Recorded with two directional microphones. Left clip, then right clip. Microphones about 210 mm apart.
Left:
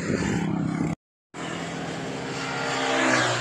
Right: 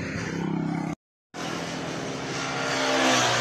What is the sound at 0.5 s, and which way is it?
Vehicle, 20° left (ahead or behind).